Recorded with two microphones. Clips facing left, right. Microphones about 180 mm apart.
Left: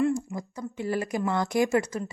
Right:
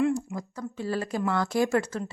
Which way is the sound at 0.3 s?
15° left (ahead or behind).